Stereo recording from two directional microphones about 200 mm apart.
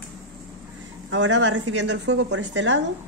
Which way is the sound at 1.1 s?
65° right (ahead or behind).